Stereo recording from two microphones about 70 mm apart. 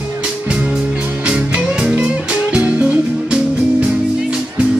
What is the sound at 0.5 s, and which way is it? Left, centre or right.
Music, centre.